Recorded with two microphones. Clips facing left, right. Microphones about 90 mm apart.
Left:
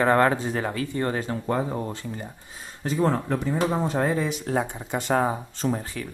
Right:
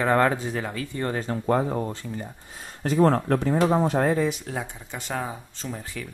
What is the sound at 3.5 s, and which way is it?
Speech, 20° right (ahead or behind).